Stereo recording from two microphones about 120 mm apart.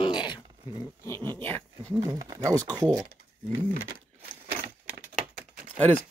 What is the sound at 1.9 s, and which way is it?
Speech, 30° right (ahead or behind).